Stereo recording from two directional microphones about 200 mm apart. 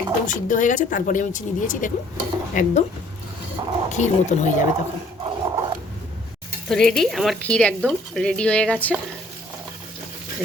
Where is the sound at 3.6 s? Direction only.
20° right (ahead or behind).